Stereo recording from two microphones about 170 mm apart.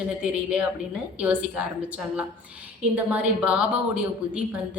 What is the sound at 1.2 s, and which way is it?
A woman's voice, 5° right (ahead or behind).